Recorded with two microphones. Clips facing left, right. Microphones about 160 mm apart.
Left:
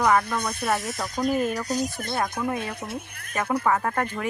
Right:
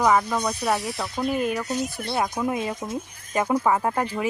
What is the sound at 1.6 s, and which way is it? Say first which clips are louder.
Speech: even; 40° left (ahead or behind).